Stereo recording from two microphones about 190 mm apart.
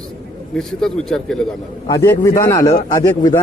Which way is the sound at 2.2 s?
15° left (ahead or behind).